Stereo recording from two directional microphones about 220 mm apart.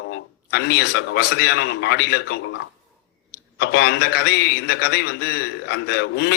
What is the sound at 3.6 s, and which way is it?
A man's voice, 50° left (ahead or behind).